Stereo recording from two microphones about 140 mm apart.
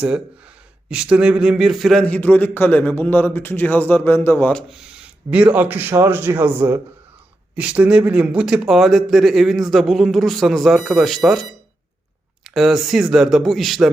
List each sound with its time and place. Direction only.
0.9 s a man's voice: 10° right (ahead or behind); by 4.5 s 15° left (ahead or behind)
4.5 s a man's voice: 5° right (ahead or behind)
12.5 s a man's voice: centre (ahead or behind)